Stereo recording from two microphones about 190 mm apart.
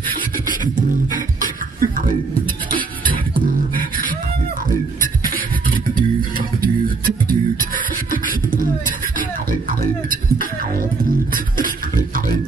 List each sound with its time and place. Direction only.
1.1 s music: 45° right (ahead or behind)
7.2 s beatboxing: 50° right (ahead or behind)